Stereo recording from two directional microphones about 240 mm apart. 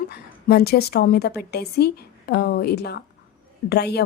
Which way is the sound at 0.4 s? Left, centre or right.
Left.